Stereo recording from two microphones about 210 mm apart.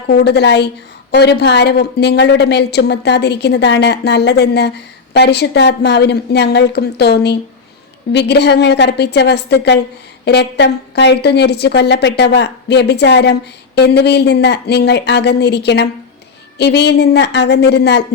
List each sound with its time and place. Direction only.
0.1 s a woman's voice: 50° left (ahead or behind)